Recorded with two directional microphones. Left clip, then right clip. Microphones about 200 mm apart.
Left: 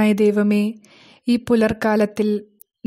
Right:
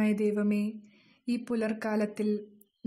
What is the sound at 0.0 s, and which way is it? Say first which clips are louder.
A woman's voice: left 12 dB; 40° left (ahead or behind).